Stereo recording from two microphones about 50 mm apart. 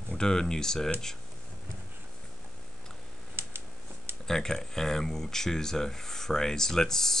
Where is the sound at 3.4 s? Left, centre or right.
Right.